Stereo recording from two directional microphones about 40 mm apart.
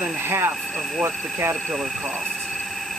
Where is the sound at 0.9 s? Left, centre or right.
Right.